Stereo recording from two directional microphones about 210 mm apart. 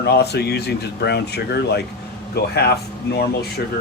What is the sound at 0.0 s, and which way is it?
Speech, 50° left (ahead or behind).